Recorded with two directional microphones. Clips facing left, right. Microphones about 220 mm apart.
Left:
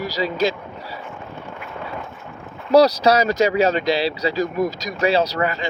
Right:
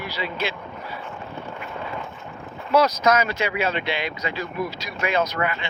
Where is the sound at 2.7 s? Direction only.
35° left (ahead or behind).